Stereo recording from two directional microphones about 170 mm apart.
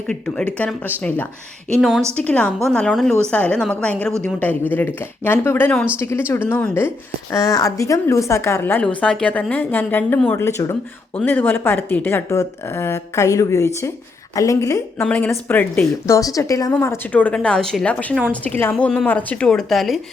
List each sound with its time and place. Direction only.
0.1 s a woman's voice: 5° left (ahead or behind)
1.7 s a woman's voice: centre (ahead or behind)